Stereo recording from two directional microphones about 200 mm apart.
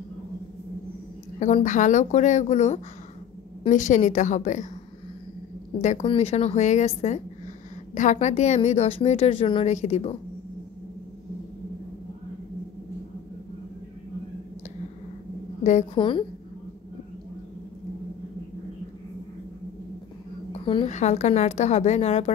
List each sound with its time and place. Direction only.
1.4 s a woman's voice: 35° left (ahead or behind)
5.8 s a woman's voice: 35° left (ahead or behind)
15.6 s a woman's voice: 35° left (ahead or behind)
16.0 s a woman's voice: 25° left (ahead or behind)
20.5 s a woman's voice: 30° left (ahead or behind)